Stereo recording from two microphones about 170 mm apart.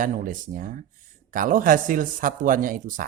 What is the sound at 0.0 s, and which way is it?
Speech, 50° right (ahead or behind).